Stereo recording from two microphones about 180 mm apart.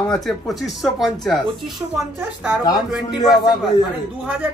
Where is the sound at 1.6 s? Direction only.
15° right (ahead or behind).